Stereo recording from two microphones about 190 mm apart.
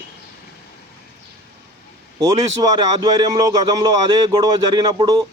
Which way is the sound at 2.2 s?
20° right (ahead or behind).